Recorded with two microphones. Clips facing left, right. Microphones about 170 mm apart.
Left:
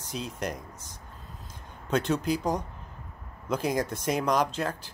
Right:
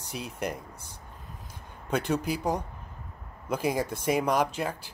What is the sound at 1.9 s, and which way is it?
Speech, 10° right (ahead or behind).